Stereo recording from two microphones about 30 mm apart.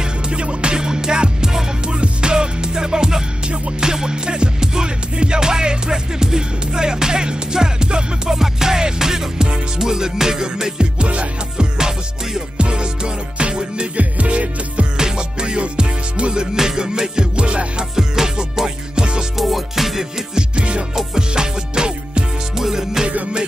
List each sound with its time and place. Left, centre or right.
0.3 s music: right
12.5 s music: right
13.9 s music: right
15.0 s music: right
17.9 s music: centre
18.9 s music: right
19.3 s music: centre
20.3 s music: right
20.9 s music: right
22.6 s music: centre